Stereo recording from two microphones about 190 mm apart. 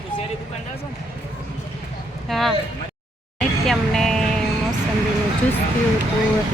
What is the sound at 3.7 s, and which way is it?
Music, centre (ahead or behind).